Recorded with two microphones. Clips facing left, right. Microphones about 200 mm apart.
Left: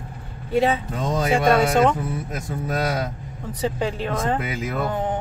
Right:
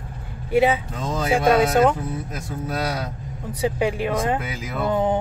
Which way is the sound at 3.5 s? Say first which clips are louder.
Right 2 dB; 10° right (ahead or behind).